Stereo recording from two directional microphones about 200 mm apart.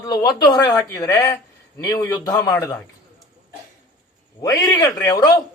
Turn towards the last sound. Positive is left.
turn(degrees=20)  # may be behind; listen again after turning